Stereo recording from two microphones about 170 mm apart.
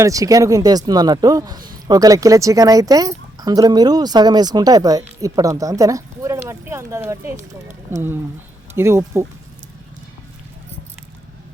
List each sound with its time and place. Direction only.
0.0 s speech: 20° right (ahead or behind)